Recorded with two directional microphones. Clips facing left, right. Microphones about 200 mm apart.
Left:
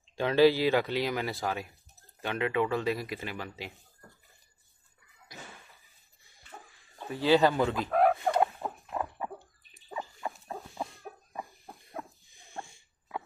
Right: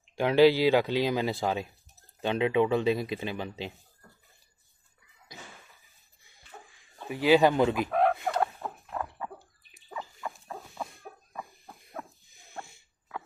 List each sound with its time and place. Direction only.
0.0 s speech: 15° right (ahead or behind)
7.1 s speech: 15° right (ahead or behind)
7.9 s fowl: 5° left (ahead or behind)
8.3 s fowl: 15° left (ahead or behind)
9.9 s rodents: 20° left (ahead or behind)